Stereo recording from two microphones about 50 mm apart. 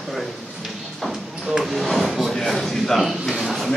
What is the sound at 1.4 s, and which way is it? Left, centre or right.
Speech, centre.